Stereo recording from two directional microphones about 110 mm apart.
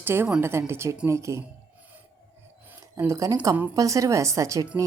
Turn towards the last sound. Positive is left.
turn(degrees=-30)  # may be behind; listen again after turning